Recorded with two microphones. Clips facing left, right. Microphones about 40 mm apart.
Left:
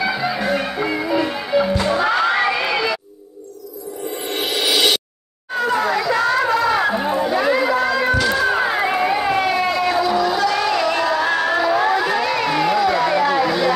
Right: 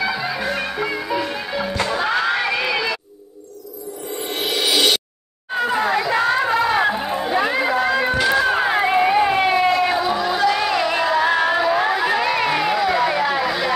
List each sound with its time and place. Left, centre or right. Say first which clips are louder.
0.0 s music: left 2 dB; centre
5.5 s chatter: left 1 dB; centre
7.1 s run: left 3 dB; centre
8.5 s a sound: right 1 dB; centre
9.8 s music: left 2 dB; right